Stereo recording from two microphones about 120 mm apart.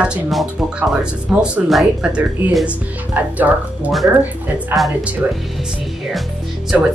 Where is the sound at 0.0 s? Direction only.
5° right (ahead or behind).